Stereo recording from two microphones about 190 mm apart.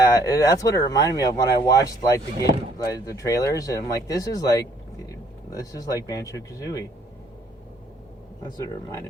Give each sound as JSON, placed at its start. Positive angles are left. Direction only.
{"t": 0.0, "sound": "speech", "side_deg": 15}
{"t": 5.0, "sound": "vehicle", "side_deg": 20}
{"t": 6.1, "sound": "speech", "side_deg": 20}
{"t": 8.4, "sound": "speech", "side_deg": 20}